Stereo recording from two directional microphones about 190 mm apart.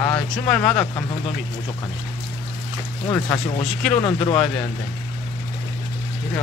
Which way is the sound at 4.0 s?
25° left (ahead or behind).